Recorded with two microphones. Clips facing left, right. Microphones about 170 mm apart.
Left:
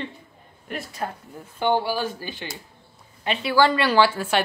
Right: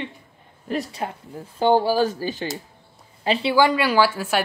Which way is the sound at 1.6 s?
40° right (ahead or behind).